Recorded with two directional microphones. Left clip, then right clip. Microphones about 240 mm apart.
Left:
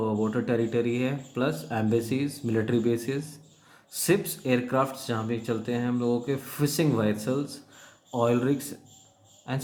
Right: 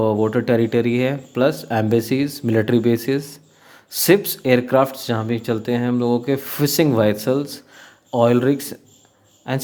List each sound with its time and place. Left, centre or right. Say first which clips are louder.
0.0 s speech: right 10 dB; right